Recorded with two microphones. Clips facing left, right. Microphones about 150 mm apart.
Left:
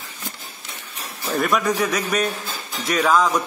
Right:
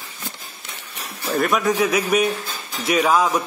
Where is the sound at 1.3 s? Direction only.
Centre (ahead or behind).